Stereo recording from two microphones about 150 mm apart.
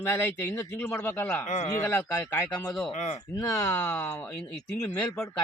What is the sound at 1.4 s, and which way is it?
Speech, 50° left (ahead or behind).